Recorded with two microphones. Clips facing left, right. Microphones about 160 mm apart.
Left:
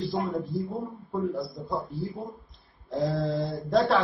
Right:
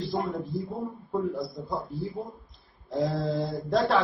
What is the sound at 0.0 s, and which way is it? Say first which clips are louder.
A man's voice: left 1 dB; centre (ahead or behind).